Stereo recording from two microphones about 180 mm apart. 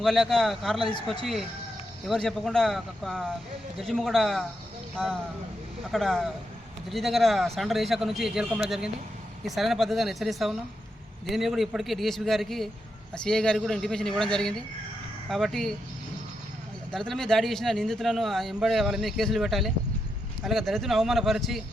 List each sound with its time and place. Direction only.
0.0 s speech: centre (ahead or behind)
16.9 s speech: centre (ahead or behind)